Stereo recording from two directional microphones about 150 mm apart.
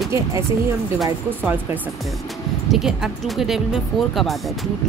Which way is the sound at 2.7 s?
Centre (ahead or behind).